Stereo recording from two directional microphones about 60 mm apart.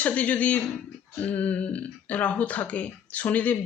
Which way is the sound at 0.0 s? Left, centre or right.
Left.